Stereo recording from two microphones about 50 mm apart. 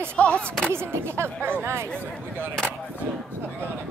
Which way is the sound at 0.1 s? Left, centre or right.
Left.